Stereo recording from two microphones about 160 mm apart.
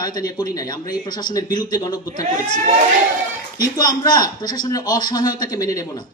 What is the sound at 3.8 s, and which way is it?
A man's voice, 25° left (ahead or behind).